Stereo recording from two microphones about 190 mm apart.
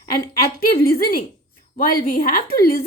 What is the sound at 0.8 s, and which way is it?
A woman's voice, 50° left (ahead or behind).